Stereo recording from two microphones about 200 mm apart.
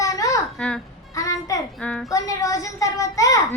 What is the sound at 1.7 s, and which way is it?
Speech, 5° left (ahead or behind).